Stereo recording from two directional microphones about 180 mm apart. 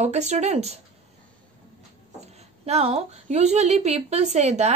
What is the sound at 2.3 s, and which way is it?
A woman's voice, 35° right (ahead or behind).